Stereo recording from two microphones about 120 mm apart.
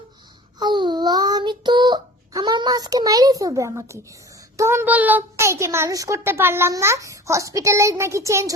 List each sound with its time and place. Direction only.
0.6 s child singing: 40° right (ahead or behind)
4.5 s a child's voice: 20° right (ahead or behind)